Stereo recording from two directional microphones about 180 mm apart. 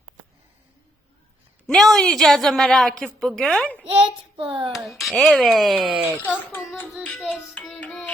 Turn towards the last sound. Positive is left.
turn(degrees=5)  # may be behind; listen again after turning